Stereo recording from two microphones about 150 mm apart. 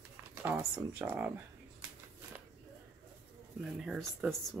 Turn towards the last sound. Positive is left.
turn(degrees=0)  # may be behind; listen again after turning